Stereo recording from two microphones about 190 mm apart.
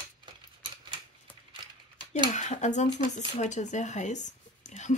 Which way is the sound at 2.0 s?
25° right (ahead or behind).